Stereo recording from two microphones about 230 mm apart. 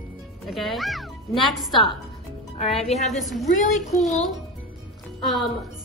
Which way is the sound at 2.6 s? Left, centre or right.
Left.